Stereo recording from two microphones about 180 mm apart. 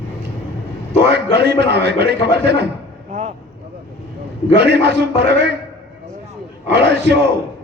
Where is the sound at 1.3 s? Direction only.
65° right (ahead or behind).